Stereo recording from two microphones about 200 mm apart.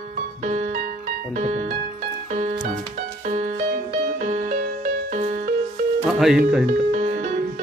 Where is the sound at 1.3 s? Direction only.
35° right (ahead or behind).